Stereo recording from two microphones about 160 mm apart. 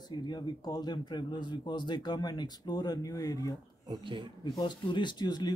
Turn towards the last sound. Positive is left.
turn(degrees=25)  # may be behind; listen again after turning